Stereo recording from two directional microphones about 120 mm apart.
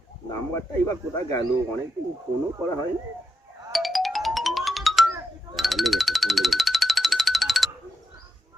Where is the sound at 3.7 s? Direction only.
Centre (ahead or behind).